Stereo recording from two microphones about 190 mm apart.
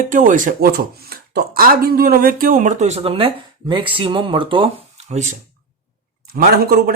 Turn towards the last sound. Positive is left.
turn(degrees=-50)  # may be behind; listen again after turning